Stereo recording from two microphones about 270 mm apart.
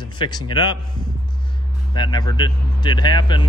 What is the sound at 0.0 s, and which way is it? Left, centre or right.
Speech, centre.